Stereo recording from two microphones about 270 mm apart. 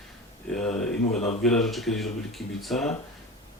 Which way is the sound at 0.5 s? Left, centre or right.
Centre.